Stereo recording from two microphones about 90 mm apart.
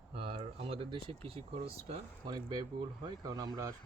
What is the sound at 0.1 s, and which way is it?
Speech, 90° right.